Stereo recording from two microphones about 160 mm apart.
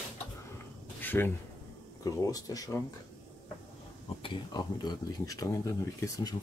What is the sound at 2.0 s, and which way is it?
Speech, 20° left (ahead or behind).